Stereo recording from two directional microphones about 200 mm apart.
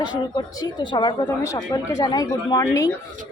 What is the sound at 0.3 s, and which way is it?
A woman's voice, 20° left (ahead or behind).